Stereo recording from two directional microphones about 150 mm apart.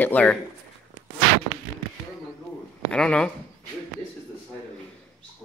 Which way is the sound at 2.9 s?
5° left (ahead or behind).